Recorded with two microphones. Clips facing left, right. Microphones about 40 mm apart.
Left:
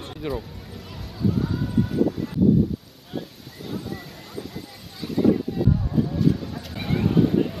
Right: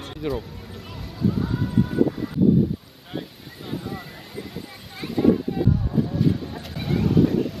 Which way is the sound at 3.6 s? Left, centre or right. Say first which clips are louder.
Right 1 dB; centre.